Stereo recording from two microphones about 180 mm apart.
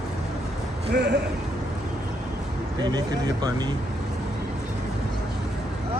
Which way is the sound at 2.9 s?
20° right (ahead or behind).